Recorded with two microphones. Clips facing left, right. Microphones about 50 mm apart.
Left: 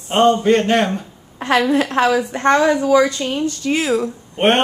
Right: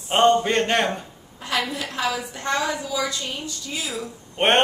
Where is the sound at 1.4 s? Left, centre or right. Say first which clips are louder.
Left 11 dB; left.